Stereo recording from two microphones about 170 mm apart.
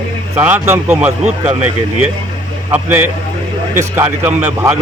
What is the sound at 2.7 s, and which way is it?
Speech, 10° right (ahead or behind).